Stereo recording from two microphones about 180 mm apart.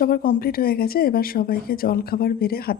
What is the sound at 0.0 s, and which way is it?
Speech, 55° left (ahead or behind).